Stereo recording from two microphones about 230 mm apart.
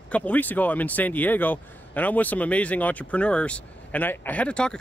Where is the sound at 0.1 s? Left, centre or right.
Centre.